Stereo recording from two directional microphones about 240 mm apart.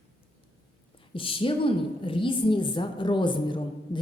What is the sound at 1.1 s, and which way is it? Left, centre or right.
A woman's voice, left.